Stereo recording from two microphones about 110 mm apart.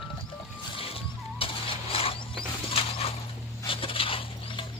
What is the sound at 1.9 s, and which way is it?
Mechanisms, 60° left (ahead or behind).